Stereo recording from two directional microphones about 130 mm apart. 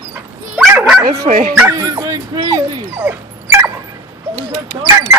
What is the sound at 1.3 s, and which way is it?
Speech, 90° right.